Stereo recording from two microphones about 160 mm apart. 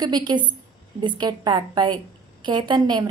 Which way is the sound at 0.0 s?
25° right (ahead or behind).